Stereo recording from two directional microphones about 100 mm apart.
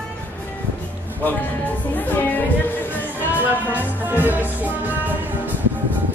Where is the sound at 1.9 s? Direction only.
15° left (ahead or behind).